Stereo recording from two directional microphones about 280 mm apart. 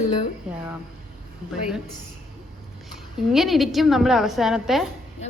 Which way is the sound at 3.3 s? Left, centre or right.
Centre.